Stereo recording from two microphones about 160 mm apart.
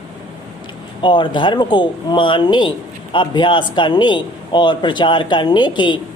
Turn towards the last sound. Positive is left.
turn(degrees=30)  # may be behind; listen again after turning